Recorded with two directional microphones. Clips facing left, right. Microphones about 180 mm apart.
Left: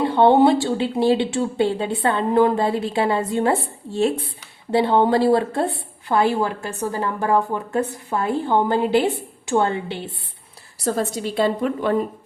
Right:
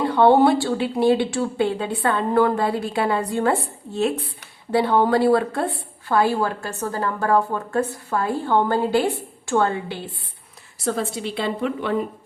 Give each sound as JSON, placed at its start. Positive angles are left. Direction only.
{"t": 0.0, "sound": "a woman's voice", "side_deg": 25}
{"t": 10.8, "sound": "a woman's voice", "side_deg": 40}